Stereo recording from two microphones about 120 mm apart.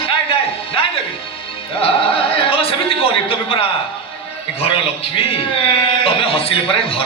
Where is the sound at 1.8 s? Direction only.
50° left (ahead or behind).